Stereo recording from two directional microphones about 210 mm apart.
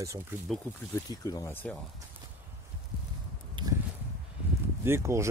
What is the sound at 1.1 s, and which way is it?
Speech, 15° left (ahead or behind).